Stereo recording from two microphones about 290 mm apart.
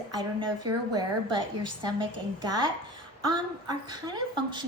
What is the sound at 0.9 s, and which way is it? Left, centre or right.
A woman's voice, centre.